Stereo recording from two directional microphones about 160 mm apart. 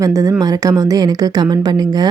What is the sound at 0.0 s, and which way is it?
Speech, 20° right (ahead or behind).